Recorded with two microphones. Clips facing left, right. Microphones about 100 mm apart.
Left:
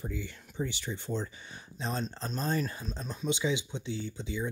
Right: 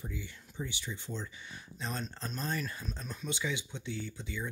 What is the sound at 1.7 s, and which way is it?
Speech, 25° left (ahead or behind).